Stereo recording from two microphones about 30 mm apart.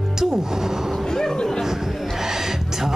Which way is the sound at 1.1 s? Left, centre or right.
Left.